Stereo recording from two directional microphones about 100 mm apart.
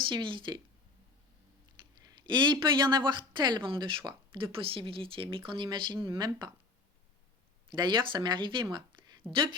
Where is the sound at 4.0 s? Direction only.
45° right (ahead or behind).